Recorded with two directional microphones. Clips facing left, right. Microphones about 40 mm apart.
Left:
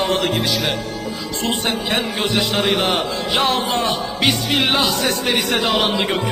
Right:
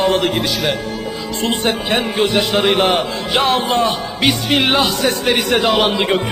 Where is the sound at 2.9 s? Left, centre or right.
Centre.